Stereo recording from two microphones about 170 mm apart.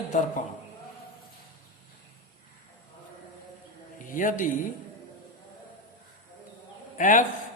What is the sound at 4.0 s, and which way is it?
Music, 50° left (ahead or behind).